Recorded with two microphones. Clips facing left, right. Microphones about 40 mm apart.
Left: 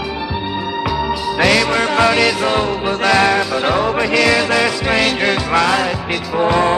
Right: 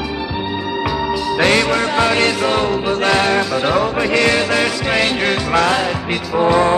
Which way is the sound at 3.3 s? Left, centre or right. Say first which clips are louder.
Even; centre.